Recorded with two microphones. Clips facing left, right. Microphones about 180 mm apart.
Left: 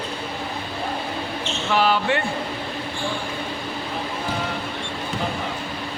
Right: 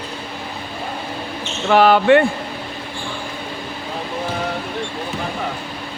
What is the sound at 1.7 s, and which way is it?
Speech, 60° right (ahead or behind).